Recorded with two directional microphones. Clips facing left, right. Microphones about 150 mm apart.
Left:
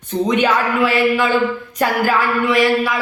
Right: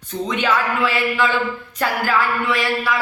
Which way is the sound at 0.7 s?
15° left (ahead or behind).